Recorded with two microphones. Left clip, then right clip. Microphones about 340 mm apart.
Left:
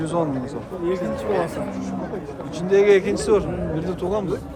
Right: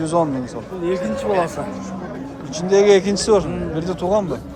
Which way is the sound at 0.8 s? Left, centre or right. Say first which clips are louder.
Right 3 dB; right.